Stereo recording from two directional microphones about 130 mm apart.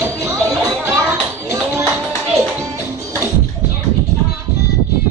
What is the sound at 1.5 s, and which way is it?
Tap, 20° right (ahead or behind).